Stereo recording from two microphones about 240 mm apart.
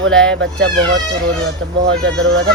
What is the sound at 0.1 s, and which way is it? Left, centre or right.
Speech, centre.